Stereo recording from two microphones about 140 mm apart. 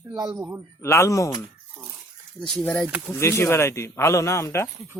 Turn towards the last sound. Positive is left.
turn(degrees=20)  # may be behind; listen again after turning